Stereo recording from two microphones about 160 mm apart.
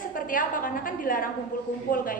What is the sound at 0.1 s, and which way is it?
A woman's voice, 60° left (ahead or behind).